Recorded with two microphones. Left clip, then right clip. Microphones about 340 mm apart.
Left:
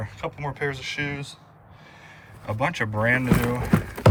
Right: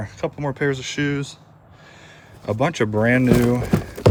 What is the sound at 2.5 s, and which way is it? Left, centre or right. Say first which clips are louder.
Speech: right 5 dB; centre.